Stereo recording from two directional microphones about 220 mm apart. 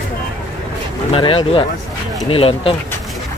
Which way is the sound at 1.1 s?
25° left (ahead or behind).